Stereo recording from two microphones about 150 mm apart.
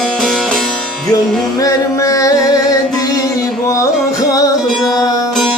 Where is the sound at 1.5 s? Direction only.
20° left (ahead or behind).